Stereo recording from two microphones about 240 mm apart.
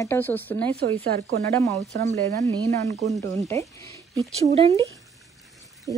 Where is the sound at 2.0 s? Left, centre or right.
Centre.